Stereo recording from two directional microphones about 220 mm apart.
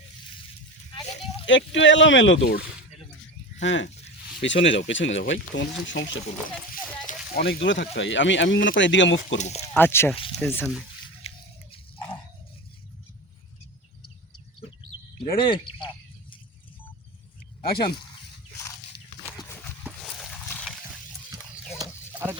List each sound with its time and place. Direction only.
1.5 s speech: 55° left (ahead or behind)
3.6 s speech: 60° left (ahead or behind)
7.1 s speech: 45° left (ahead or behind)
9.4 s speech: 30° left (ahead or behind)
9.7 s speech: 10° left (ahead or behind)
10.2 s speech: 25° left (ahead or behind)
10.4 s speech: 10° left (ahead or behind)
11.3 s a sound: 25° left (ahead or behind)
15.4 s speech: 20° left (ahead or behind)
17.7 s speech: 45° left (ahead or behind)
20.5 s a sound: 5° left (ahead or behind)
21.8 s a sound: 10° right (ahead or behind)